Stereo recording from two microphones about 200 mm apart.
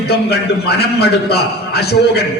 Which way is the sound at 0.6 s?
55° left (ahead or behind).